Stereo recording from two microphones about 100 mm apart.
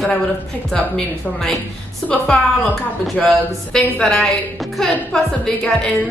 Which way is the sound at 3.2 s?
10° left (ahead or behind).